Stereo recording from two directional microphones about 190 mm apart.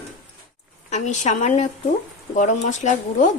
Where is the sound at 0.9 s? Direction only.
40° left (ahead or behind).